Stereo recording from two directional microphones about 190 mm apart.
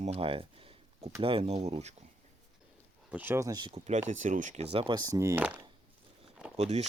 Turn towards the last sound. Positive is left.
turn(degrees=-35)  # may be behind; listen again after turning